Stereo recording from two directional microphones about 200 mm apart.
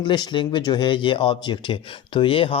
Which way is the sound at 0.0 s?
20° left (ahead or behind).